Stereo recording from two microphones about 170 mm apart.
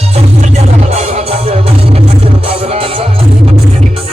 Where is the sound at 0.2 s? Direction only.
40° right (ahead or behind).